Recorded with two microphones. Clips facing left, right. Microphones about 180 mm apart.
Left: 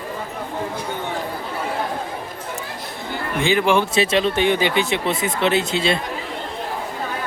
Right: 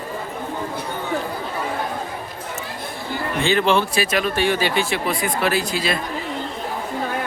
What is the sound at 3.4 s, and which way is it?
Speech, 15° left (ahead or behind).